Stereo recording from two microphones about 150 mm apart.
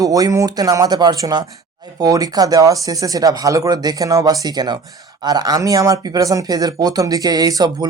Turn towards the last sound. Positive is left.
turn(degrees=-25)  # may be behind; listen again after turning